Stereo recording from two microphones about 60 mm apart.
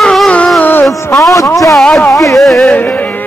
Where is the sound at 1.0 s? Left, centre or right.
Left.